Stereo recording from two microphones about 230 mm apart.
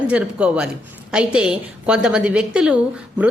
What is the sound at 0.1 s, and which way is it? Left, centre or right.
A woman's voice, centre.